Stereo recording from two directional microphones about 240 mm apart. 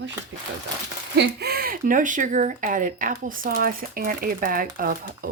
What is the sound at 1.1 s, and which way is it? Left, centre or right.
Speech, right.